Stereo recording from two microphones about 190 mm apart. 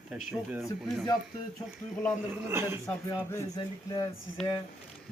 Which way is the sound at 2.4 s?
10° right (ahead or behind).